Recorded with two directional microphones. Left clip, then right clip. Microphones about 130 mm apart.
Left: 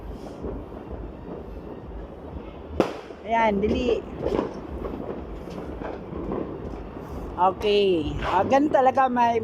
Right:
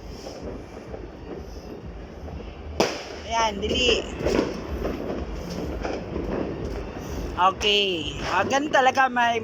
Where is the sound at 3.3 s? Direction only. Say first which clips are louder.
Left 3 dB; 75° left (ahead or behind).